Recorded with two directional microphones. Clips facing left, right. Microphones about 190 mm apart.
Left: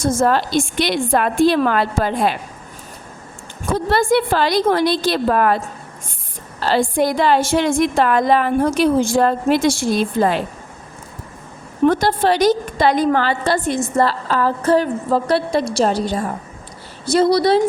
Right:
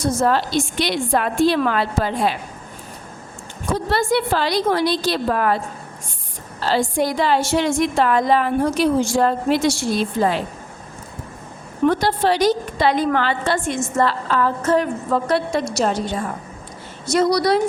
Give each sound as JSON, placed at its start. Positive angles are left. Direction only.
{"t": 0.2, "sound": "a woman's voice", "side_deg": 50}
{"t": 3.7, "sound": "a woman's voice", "side_deg": 50}
{"t": 6.6, "sound": "a woman's voice", "side_deg": 55}
{"t": 11.9, "sound": "a woman's voice", "side_deg": 45}